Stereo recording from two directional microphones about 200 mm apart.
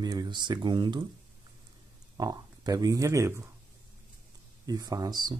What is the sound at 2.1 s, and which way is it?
Speech, 20° right (ahead or behind).